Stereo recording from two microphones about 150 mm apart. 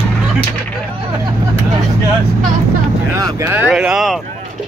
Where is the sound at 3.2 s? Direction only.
15° right (ahead or behind); by 4.2 s centre (ahead or behind).